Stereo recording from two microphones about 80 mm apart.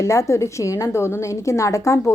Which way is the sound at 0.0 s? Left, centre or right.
Left.